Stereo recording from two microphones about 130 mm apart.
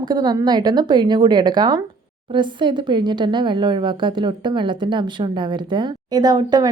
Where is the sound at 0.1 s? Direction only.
35° right (ahead or behind).